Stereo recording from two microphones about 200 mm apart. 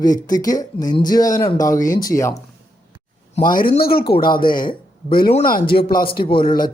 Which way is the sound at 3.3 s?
45° left (ahead or behind).